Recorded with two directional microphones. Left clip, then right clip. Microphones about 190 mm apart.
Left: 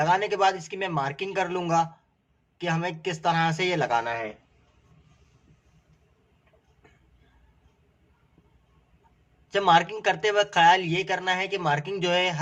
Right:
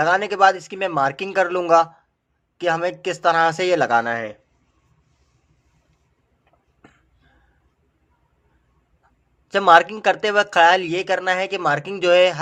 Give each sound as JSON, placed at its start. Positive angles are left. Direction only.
{"t": 0.0, "sound": "speech", "side_deg": -45}
{"t": 9.5, "sound": "speech", "side_deg": -45}